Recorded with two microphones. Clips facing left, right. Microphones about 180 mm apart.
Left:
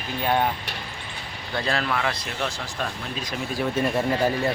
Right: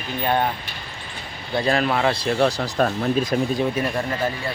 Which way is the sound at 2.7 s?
50° right (ahead or behind).